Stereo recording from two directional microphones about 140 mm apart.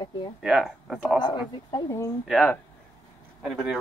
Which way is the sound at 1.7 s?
25° left (ahead or behind).